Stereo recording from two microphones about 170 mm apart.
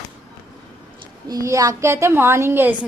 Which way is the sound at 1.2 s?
20° right (ahead or behind).